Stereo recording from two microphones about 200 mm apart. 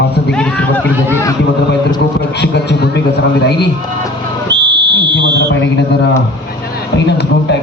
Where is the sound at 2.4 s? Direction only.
55° left (ahead or behind).